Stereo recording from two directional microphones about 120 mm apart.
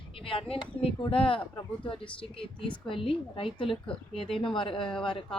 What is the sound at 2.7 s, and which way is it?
A woman's voice, 45° left (ahead or behind).